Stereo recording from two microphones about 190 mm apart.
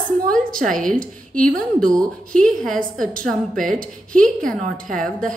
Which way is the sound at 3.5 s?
45° right (ahead or behind).